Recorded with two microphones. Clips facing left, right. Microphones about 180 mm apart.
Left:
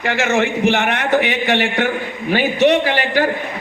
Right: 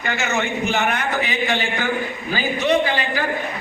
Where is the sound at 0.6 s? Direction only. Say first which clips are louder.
Left 4 dB; 80° left.